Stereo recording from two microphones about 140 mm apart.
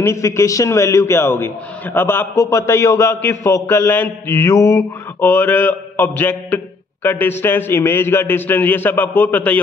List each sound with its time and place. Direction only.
0.0 s a man's voice: 20° left (ahead or behind)